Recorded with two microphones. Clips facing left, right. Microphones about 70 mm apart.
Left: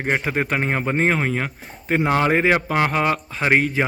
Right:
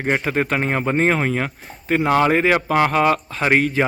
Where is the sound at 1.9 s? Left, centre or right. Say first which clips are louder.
Right 2 dB; centre.